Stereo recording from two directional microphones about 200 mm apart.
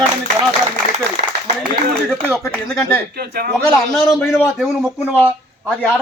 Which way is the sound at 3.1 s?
50° right (ahead or behind).